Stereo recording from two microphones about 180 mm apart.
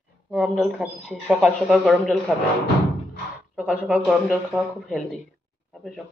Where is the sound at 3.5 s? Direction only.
5° right (ahead or behind).